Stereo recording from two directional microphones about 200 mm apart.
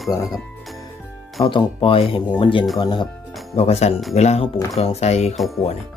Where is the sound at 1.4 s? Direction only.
25° left (ahead or behind).